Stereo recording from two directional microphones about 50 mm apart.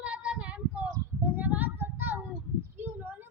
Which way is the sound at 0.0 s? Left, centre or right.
Right.